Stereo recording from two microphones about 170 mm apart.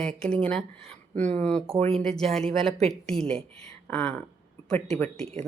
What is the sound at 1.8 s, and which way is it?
Speech, 40° right (ahead or behind).